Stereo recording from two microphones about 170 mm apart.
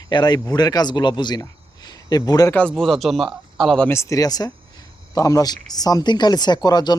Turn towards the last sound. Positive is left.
turn(degrees=25)  # may be behind; listen again after turning